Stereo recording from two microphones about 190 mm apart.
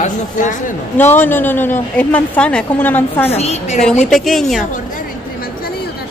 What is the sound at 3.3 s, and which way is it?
Speech, 35° left (ahead or behind).